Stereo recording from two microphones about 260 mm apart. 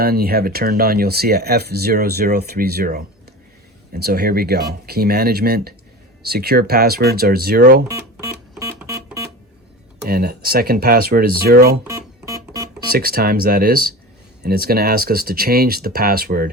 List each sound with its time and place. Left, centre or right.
0.0 s speech: right
8.8 s music: centre
10.0 s speech: right
12.2 s music: centre
12.9 s speech: right